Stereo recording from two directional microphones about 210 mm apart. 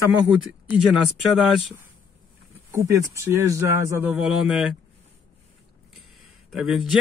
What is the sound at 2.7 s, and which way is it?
Speech, 15° right (ahead or behind).